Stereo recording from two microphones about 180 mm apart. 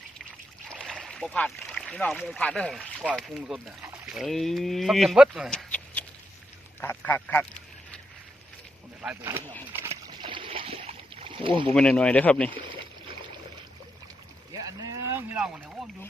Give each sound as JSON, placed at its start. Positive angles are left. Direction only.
{"t": 0.8, "sound": "speech", "side_deg": 0}
{"t": 6.8, "sound": "duck", "side_deg": 10}
{"t": 9.0, "sound": "speech", "side_deg": -10}
{"t": 9.7, "sound": "boat", "side_deg": -15}
{"t": 10.1, "sound": "rowboat", "side_deg": -25}
{"t": 11.7, "sound": "speech", "side_deg": 5}
{"t": 14.5, "sound": "boat", "side_deg": -15}